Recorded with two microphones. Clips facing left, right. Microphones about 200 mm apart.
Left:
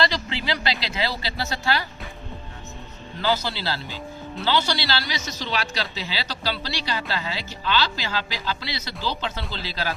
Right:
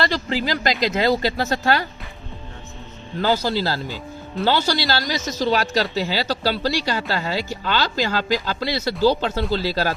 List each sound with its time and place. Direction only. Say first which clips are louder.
0.3 s a woman's voice: right 5 dB; 40° right (ahead or behind)
3.2 s a woman's voice: right 5 dB; 45° right (ahead or behind)